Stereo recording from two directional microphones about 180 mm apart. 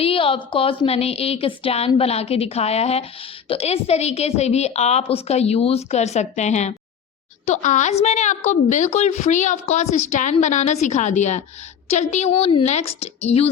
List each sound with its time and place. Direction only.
0.0 s a woman's voice: 30° left (ahead or behind)